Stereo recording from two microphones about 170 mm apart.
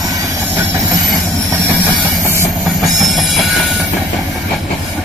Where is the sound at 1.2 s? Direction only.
5° left (ahead or behind).